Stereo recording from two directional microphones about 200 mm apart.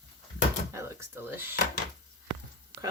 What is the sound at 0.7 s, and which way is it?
Speech, 15° right (ahead or behind).